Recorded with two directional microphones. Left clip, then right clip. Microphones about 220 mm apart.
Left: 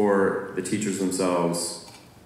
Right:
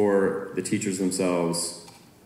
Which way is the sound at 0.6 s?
35° right (ahead or behind).